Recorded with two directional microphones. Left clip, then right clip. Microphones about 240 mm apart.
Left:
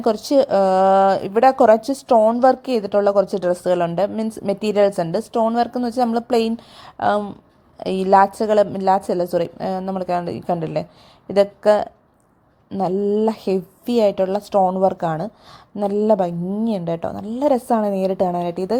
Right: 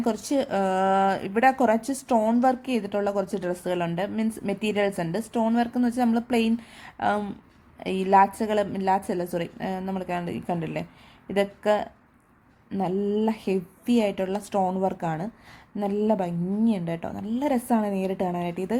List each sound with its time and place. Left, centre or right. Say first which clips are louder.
0.0 s a woman's voice: left 9 dB; centre